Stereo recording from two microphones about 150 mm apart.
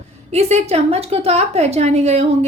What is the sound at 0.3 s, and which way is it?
A woman's voice, 45° right (ahead or behind).